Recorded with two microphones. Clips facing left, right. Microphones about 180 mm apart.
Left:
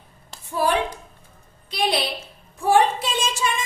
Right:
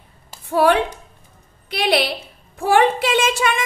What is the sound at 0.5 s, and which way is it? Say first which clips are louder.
A woman's voice: right 6 dB; 60° right (ahead or behind).